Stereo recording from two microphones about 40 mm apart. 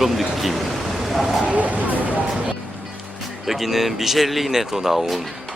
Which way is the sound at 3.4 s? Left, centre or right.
Centre.